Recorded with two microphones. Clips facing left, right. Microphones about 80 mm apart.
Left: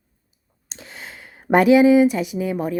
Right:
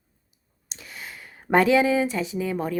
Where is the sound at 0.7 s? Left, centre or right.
Left.